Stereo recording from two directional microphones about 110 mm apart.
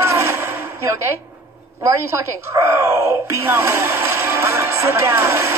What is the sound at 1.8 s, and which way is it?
Speech, 25° right (ahead or behind).